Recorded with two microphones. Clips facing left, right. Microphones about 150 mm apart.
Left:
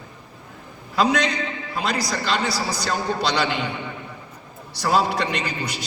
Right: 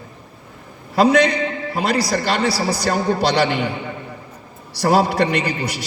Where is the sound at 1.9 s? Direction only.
30° right (ahead or behind).